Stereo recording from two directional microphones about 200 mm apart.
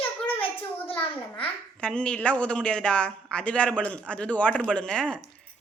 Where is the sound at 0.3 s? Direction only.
30° left (ahead or behind).